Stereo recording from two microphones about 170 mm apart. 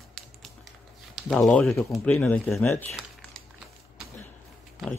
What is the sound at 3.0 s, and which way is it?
Crumpling, centre (ahead or behind).